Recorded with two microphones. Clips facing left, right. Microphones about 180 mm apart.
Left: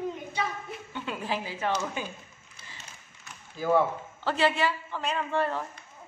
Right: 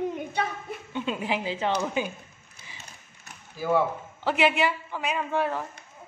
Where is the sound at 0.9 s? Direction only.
20° right (ahead or behind).